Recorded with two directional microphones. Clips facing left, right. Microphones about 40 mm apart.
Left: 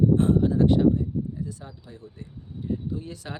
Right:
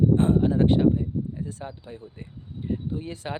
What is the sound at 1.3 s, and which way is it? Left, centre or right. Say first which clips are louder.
Speech: right 1 dB; right.